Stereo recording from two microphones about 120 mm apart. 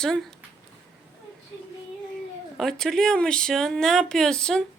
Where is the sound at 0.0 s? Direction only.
5° left (ahead or behind).